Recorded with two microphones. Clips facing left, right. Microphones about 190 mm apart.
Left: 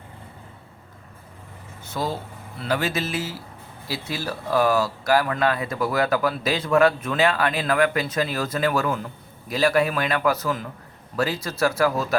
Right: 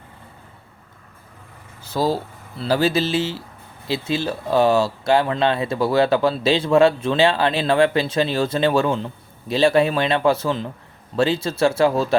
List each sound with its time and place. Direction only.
1.8 s speech: 35° right (ahead or behind)